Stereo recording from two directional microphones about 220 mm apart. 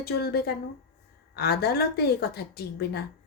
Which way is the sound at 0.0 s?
45° left (ahead or behind).